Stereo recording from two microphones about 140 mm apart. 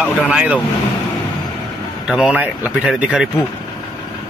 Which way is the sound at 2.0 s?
5° right (ahead or behind).